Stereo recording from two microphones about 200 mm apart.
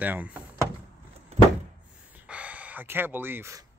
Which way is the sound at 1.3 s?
30° right (ahead or behind).